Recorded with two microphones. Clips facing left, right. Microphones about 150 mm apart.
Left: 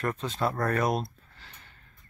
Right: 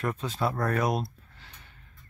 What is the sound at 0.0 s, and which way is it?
Speech, centre (ahead or behind).